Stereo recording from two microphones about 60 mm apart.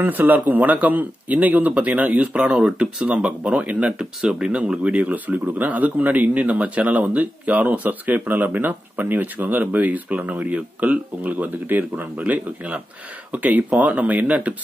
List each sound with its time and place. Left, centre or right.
0.0 s speech: right